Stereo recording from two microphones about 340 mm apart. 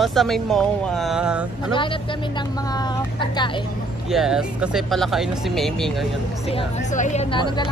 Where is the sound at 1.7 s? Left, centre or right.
Centre.